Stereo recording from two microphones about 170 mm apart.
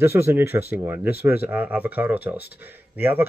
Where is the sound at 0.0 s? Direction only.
15° right (ahead or behind).